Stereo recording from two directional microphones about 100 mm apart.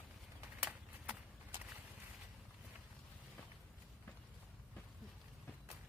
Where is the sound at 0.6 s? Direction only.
15° right (ahead or behind).